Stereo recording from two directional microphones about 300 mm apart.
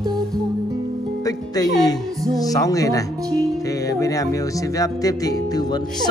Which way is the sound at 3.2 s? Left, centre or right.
Centre.